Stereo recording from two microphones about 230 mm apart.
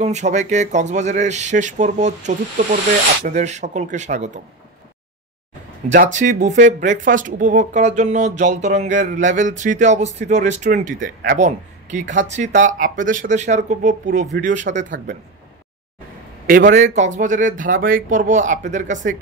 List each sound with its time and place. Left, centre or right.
0.0 s speech: right
5.8 s speech: right
14.7 s speech: right
16.4 s speech: right